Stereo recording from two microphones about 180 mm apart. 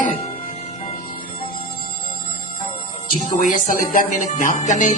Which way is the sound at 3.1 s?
45° left (ahead or behind).